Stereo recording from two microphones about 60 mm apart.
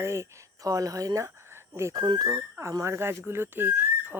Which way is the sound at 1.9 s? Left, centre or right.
Right.